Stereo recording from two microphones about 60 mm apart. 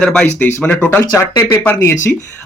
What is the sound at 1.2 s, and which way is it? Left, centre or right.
Speech, left.